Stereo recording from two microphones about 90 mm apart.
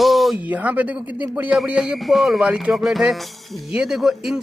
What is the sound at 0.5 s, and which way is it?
Speech, 20° right (ahead or behind).